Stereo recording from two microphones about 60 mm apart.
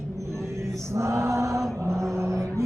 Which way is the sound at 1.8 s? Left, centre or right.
Right.